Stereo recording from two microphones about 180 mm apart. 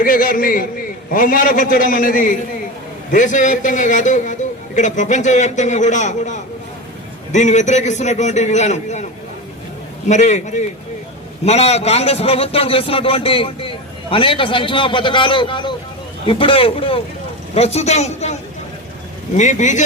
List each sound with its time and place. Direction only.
0.0 s a man's voice: 50° left (ahead or behind)
10.1 s a man's voice: 40° left (ahead or behind)
19.4 s a man's voice: 40° left (ahead or behind)